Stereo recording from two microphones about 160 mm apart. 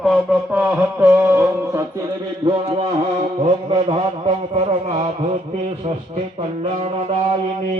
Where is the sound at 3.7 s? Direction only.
40° right (ahead or behind).